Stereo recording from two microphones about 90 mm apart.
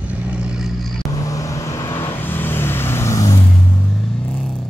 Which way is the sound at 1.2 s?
35° left (ahead or behind).